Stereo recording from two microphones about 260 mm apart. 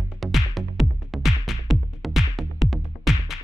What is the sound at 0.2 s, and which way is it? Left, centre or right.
Music, centre.